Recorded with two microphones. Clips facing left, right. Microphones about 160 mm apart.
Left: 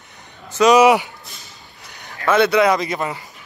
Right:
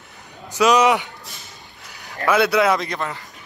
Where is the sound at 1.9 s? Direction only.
Centre (ahead or behind).